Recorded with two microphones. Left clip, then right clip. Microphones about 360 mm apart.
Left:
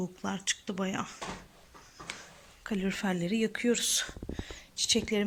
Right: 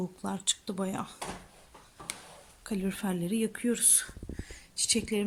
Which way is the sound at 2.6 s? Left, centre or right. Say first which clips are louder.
Left 2 dB; centre.